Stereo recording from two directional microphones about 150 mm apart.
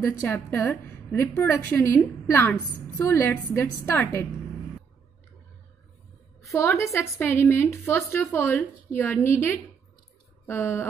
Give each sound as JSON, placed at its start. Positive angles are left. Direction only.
{"t": 0.0, "sound": "a woman's voice", "side_deg": 15}
{"t": 6.4, "sound": "a woman's voice", "side_deg": 20}